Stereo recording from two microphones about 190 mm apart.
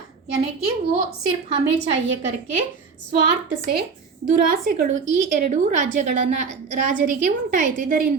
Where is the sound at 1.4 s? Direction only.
35° right (ahead or behind).